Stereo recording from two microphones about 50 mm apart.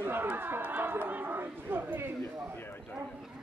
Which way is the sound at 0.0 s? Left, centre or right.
Right.